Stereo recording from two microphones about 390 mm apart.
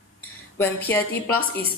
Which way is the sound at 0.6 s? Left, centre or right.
Centre.